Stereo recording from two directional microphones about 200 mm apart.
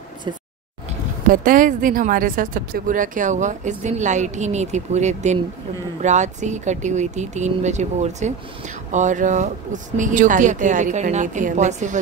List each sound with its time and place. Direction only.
1.2 s speech: 45° right (ahead or behind)